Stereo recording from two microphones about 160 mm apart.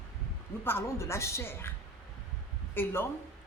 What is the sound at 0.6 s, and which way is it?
A woman's voice, 15° left (ahead or behind).